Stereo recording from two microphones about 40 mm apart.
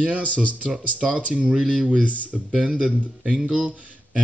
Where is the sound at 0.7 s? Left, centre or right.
Centre.